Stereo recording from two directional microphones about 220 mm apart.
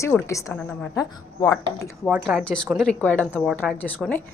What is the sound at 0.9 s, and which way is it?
Speech, 15° left (ahead or behind).